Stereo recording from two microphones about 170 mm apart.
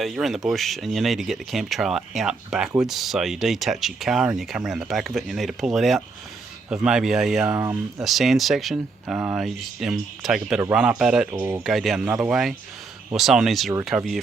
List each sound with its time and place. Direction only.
0.0 s speech: centre (ahead or behind)
7.4 s speech: 20° right (ahead or behind)
8.0 s speech: centre (ahead or behind)
11.3 s speech: 15° right (ahead or behind)
11.6 s speech: centre (ahead or behind)